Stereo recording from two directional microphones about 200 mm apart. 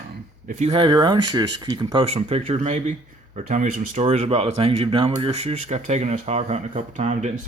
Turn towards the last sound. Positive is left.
turn(degrees=-35)  # may be behind; listen again after turning